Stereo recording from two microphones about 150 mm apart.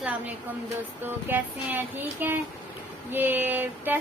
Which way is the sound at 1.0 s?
15° right (ahead or behind).